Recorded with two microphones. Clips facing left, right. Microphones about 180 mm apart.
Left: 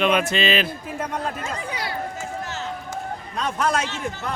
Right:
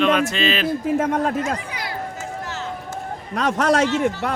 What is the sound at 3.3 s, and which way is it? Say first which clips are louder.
A man's voice: right 5 dB; 80° right.